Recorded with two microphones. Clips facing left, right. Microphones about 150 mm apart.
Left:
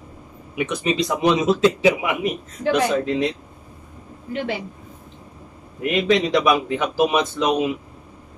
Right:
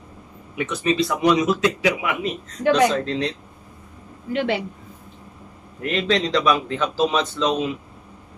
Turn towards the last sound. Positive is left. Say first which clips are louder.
# left 2 dB
turn(degrees=15)  # may be behind; listen again after turning